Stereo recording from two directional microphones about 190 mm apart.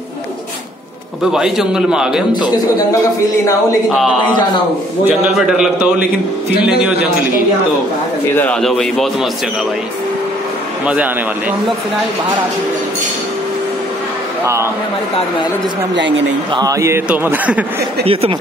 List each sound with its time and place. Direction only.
1.2 s a man's voice: 5° right (ahead or behind)
3.9 s a man's voice: centre (ahead or behind)
8.4 s a man's voice: 5° left (ahead or behind)
14.4 s a man's voice: 15° right (ahead or behind)
16.5 s a man's voice: 15° right (ahead or behind)
18.0 s speech: 30° right (ahead or behind)